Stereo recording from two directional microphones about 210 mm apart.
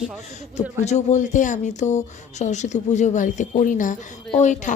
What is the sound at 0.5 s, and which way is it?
Speech, 35° left (ahead or behind).